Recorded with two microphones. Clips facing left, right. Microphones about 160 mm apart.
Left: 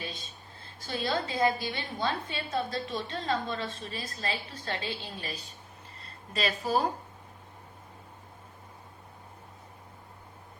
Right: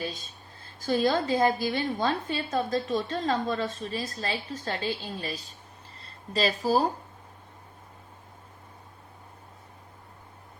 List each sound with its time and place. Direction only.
0.9 s a woman's voice: 50° right (ahead or behind)